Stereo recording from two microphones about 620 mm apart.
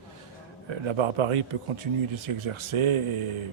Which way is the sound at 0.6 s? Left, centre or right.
Right.